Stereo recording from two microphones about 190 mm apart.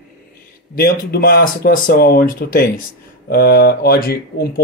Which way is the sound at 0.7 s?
50° left (ahead or behind).